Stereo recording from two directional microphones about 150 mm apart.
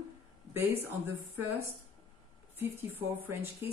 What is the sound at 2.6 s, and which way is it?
Speech, 15° right (ahead or behind).